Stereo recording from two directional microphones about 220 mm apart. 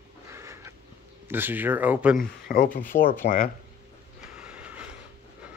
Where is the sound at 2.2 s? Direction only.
40° left (ahead or behind).